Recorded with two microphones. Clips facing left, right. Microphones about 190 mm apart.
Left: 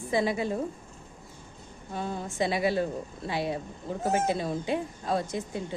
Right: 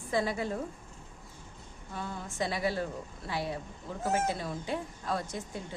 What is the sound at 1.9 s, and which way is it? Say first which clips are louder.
Speech: left 6 dB; 25° left (ahead or behind).